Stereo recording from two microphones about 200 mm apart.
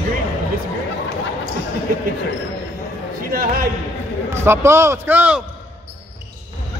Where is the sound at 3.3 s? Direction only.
45° right (ahead or behind).